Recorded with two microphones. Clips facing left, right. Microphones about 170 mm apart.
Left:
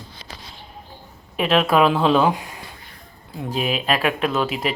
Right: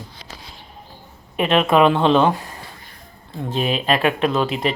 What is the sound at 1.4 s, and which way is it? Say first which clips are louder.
Speech: right 2 dB; centre (ahead or behind).